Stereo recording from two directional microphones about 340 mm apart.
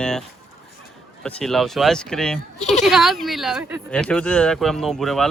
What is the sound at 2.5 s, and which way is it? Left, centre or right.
Speech, centre.